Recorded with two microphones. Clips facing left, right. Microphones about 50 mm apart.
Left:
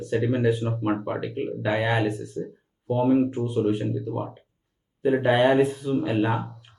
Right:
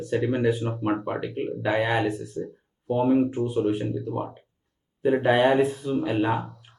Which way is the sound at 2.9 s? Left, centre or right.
Centre.